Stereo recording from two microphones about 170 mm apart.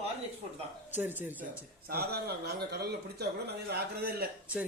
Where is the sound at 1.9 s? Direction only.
70° right (ahead or behind).